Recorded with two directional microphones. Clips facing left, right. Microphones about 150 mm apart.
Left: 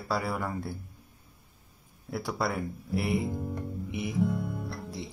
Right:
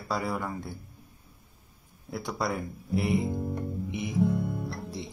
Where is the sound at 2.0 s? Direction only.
5° left (ahead or behind).